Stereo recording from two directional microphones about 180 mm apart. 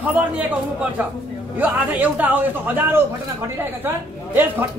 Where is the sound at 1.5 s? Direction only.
10° right (ahead or behind).